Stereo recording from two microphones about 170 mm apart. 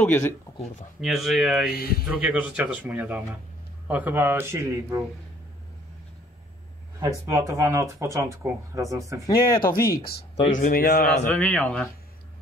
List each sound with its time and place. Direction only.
0.0 s speech: 10° left (ahead or behind)
1.0 s speech: centre (ahead or behind)
1.7 s a man's voice: 65° left (ahead or behind)
2.0 s speech: 5° right (ahead or behind)
7.0 s speech: 20° right (ahead or behind)
9.2 s speech: 20° left (ahead or behind)
10.6 s a man's voice: 60° left (ahead or behind)
11.3 s speech: 10° left (ahead or behind)